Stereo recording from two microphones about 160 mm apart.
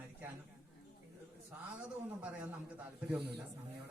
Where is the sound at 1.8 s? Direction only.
10° right (ahead or behind).